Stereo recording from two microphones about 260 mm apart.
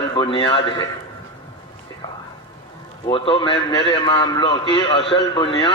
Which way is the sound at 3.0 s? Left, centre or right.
Centre.